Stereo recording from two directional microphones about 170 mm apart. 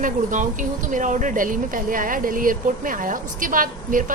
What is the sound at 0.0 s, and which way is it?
A woman's voice, 50° right (ahead or behind).